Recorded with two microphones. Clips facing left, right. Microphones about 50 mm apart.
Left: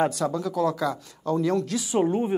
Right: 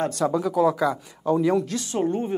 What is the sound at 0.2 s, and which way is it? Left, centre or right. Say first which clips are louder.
Speech: right 4 dB; centre.